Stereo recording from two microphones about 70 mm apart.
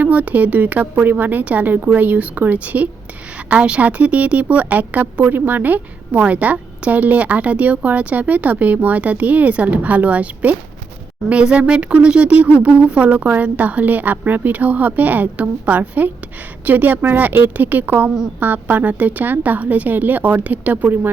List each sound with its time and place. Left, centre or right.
0.0 s speech: right